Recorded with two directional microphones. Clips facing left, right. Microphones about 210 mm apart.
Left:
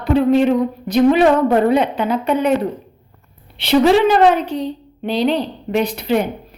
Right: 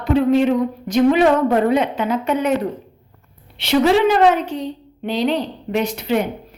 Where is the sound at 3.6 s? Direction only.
30° left (ahead or behind).